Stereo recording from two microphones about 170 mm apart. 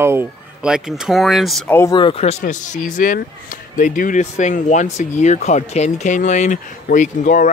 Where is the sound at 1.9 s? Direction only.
30° left (ahead or behind).